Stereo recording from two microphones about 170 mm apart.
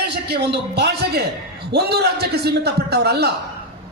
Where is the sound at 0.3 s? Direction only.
75° right (ahead or behind).